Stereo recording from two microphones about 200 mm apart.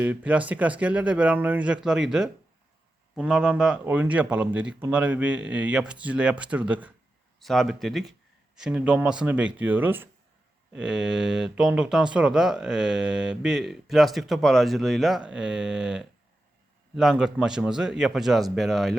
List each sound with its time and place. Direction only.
0.0 s speech: 10° right (ahead or behind)